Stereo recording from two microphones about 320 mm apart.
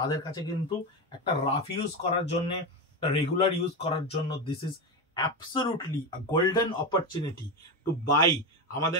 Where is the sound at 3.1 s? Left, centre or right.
Centre.